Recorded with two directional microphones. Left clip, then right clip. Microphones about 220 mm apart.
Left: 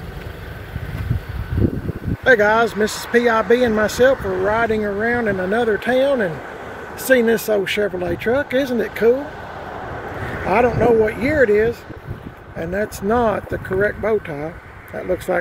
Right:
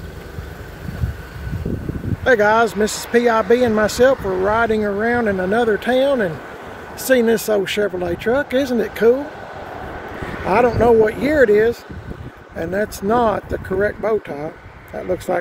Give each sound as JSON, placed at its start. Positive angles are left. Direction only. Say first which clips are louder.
{"t": 2.2, "sound": "speech", "louder": "even", "side_deg": -10}
{"t": 4.2, "sound": "speech", "louder": "right 1 dB", "side_deg": -35}
{"t": 4.5, "sound": "speech", "louder": "right 1 dB", "side_deg": -20}
{"t": 10.4, "sound": "speech", "louder": "right 1 dB", "side_deg": -15}
{"t": 13.1, "sound": "speech", "louder": "right 1 dB", "side_deg": -5}